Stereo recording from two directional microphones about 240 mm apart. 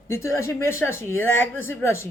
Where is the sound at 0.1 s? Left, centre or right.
Centre.